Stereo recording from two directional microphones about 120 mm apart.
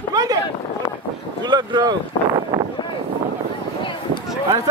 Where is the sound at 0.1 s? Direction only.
35° right (ahead or behind).